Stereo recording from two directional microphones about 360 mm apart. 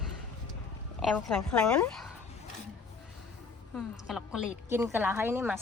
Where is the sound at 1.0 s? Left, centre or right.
Centre.